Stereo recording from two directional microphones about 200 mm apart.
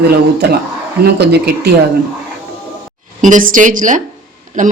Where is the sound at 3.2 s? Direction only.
40° right (ahead or behind).